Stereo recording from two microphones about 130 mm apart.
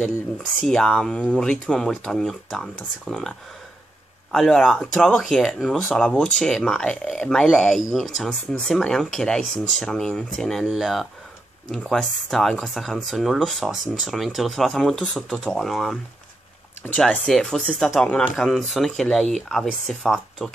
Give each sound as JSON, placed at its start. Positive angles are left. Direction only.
{"t": 0.7, "sound": "speech", "side_deg": 5}